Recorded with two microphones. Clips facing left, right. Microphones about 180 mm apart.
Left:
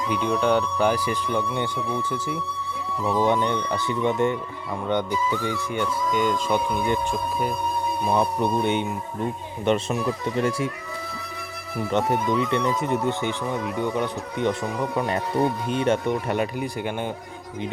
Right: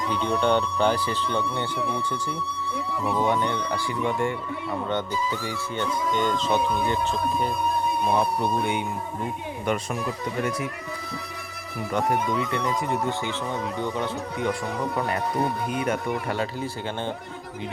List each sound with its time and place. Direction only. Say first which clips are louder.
0.1 s speech: left 1 dB; 5° left (ahead or behind)
3.2 s speech: left 2 dB; 20° left (ahead or behind)
11.9 s speech: left 2 dB; 25° left (ahead or behind)